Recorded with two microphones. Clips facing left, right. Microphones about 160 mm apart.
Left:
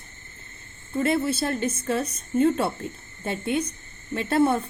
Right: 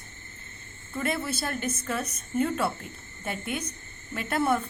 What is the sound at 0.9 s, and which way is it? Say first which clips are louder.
A woman's voice: left 7 dB; 25° left (ahead or behind).